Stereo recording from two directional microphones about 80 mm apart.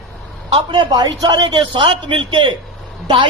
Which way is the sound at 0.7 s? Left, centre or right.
Right.